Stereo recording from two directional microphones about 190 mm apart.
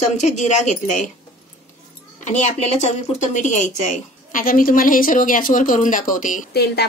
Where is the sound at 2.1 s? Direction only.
40° left (ahead or behind).